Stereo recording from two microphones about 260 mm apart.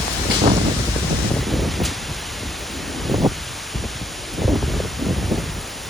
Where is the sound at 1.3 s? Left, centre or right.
Centre.